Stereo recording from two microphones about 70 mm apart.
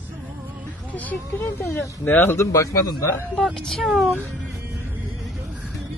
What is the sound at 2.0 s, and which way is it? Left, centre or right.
Speech, left.